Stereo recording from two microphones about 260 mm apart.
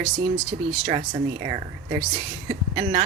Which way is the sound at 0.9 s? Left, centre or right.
Right.